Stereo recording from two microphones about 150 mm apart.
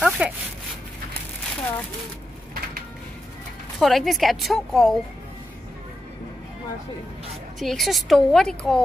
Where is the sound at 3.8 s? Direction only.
Centre (ahead or behind).